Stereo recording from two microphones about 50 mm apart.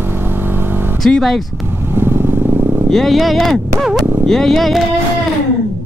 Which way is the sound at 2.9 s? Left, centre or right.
Centre.